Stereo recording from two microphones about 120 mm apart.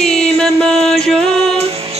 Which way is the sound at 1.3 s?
60° right (ahead or behind).